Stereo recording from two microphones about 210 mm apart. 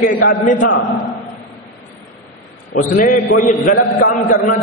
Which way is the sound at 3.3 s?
40° left (ahead or behind).